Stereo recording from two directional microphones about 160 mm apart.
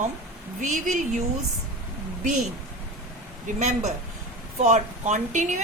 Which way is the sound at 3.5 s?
45° right (ahead or behind).